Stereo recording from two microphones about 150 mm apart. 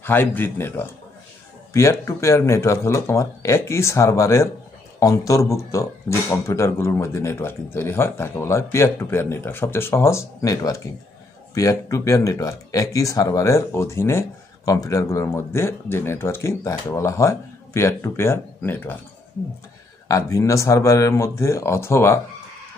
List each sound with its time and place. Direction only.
0.0 s a man's voice: 15° left (ahead or behind)
20.1 s speech: 20° left (ahead or behind)